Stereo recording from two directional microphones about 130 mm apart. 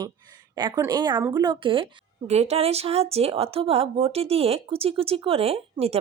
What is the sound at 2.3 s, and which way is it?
A woman's voice, 55° right (ahead or behind).